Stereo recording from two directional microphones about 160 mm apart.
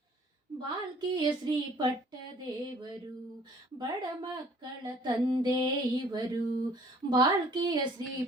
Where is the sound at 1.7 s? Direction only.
30° right (ahead or behind).